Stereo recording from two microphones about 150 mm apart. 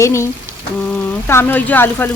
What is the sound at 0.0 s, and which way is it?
Speech, 20° left (ahead or behind).